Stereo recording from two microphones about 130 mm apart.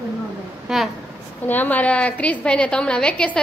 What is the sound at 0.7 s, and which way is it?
Speech, 5° right (ahead or behind).